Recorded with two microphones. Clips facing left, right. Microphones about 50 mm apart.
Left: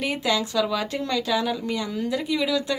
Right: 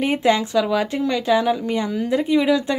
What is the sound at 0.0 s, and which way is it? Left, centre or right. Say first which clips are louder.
Speech: right 6 dB; right.